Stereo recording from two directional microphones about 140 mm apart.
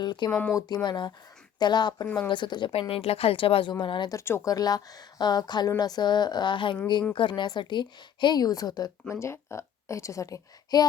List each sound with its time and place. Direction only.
0.0 s a woman's voice: 30° left (ahead or behind)
2.0 s speech: 10° left (ahead or behind)
2.3 s a woman's voice: 35° left (ahead or behind)
4.2 s a woman's voice: 20° left (ahead or behind)